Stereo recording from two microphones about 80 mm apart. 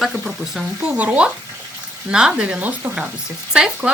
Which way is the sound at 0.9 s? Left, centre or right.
Centre.